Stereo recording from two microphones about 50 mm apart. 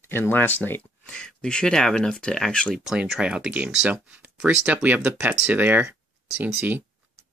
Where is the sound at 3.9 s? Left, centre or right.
Right.